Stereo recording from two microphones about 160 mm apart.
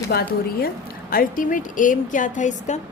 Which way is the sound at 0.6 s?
65° left (ahead or behind).